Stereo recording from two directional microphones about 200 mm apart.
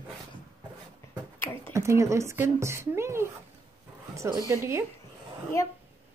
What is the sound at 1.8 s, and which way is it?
A woman's voice, 15° right (ahead or behind).